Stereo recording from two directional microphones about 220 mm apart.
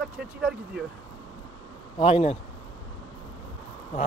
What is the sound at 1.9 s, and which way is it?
Speech, 25° left (ahead or behind).